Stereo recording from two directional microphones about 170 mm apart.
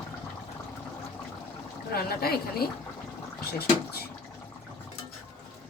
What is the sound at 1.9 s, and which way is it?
Speech, 65° left (ahead or behind).